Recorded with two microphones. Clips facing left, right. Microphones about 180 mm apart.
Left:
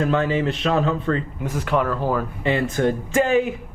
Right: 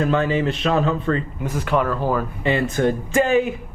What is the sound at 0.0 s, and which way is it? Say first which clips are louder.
Speech: right 1 dB; 15° right (ahead or behind).